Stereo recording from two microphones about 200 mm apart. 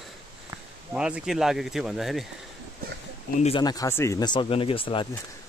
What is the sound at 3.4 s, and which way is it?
Speech, 25° left (ahead or behind).